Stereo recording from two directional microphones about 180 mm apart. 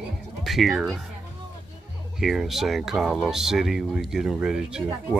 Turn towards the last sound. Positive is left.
turn(degrees=-5)  # may be behind; listen again after turning